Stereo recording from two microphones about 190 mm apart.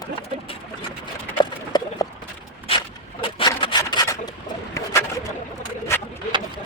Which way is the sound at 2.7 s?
30° left (ahead or behind).